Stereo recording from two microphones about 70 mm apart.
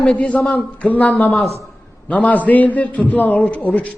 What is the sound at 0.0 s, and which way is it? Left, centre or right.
A man's voice, centre.